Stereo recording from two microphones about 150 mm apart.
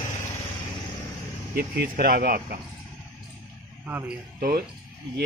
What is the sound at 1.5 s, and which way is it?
Speech, 85° right.